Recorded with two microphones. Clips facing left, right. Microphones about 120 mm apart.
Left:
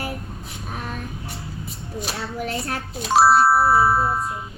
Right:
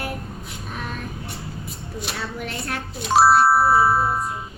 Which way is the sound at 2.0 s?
40° left (ahead or behind).